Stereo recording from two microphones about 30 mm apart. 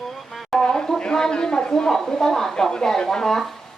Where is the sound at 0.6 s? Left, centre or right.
Left.